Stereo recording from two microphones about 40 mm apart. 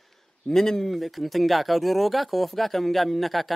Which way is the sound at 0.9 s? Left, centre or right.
Centre.